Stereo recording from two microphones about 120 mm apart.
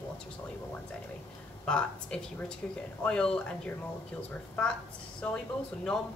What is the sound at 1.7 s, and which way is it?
Speech, 5° left (ahead or behind).